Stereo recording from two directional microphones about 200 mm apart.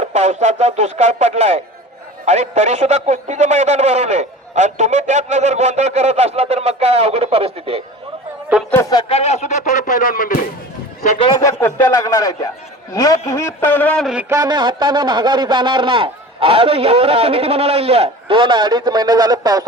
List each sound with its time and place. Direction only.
0.0 s a man's voice: 35° right (ahead or behind)
8.7 s a man's voice: 15° left (ahead or behind)
9.0 s speech: 30° left (ahead or behind)
11.2 s speech: 25° left (ahead or behind)
11.6 s a man's voice: 15° left (ahead or behind)
14.3 s a man's voice: 20° right (ahead or behind)